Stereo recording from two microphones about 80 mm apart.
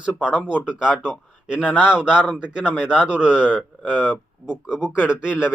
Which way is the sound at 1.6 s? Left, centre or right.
Centre.